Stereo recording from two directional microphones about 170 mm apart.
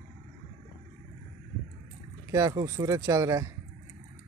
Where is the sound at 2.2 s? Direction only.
20° right (ahead or behind).